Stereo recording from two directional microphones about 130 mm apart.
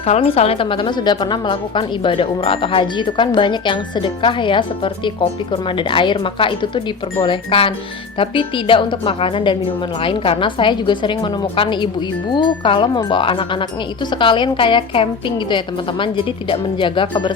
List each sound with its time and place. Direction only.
0.0 s a woman's voice: 50° left (ahead or behind)